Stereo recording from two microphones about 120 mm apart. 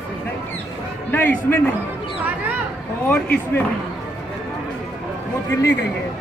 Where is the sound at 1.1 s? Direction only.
15° left (ahead or behind).